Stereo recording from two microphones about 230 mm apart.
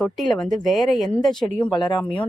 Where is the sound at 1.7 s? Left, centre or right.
Centre.